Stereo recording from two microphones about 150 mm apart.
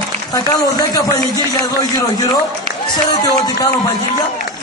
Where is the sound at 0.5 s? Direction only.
25° left (ahead or behind).